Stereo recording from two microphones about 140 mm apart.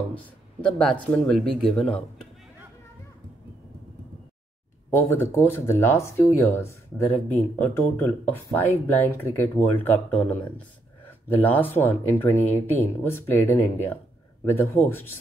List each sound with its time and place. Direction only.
0.1 s speech: 5° left (ahead or behind)
4.9 s speech: 15° left (ahead or behind)